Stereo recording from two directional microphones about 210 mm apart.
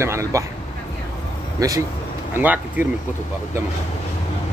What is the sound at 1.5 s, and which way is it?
Speech, 15° right (ahead or behind).